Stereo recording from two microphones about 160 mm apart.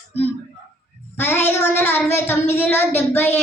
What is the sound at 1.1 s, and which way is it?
A woman's voice, 10° left (ahead or behind).